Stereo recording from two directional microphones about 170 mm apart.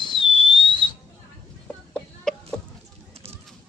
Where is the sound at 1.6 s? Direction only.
5° left (ahead or behind).